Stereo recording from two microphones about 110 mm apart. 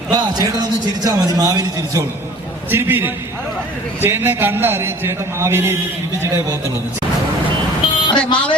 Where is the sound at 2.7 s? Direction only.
20° right (ahead or behind).